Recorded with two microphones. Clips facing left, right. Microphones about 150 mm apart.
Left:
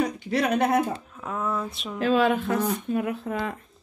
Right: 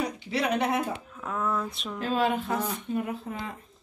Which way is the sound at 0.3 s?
45° left (ahead or behind).